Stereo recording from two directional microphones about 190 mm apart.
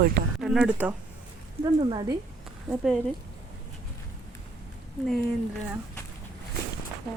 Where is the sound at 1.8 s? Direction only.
25° right (ahead or behind).